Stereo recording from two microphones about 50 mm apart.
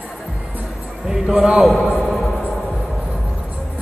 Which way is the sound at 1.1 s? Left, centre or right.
Centre.